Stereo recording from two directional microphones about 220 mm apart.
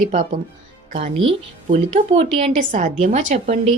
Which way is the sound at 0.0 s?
35° right (ahead or behind).